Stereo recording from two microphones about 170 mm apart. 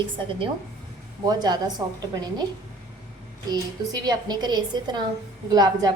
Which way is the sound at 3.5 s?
25° right (ahead or behind).